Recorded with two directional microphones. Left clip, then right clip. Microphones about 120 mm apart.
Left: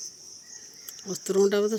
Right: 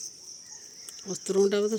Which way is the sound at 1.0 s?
5° left (ahead or behind).